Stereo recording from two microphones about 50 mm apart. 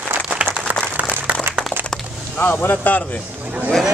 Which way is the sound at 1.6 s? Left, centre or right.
Centre.